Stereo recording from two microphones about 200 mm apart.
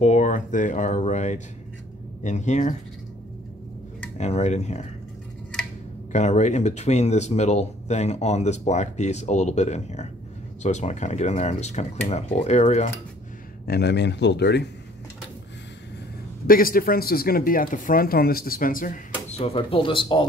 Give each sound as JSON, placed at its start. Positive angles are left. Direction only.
{"t": 0.0, "sound": "speech", "side_deg": 35}
{"t": 4.2, "sound": "speech", "side_deg": 35}
{"t": 6.1, "sound": "speech", "side_deg": 35}
{"t": 13.7, "sound": "speech", "side_deg": 55}
{"t": 16.4, "sound": "speech", "side_deg": 45}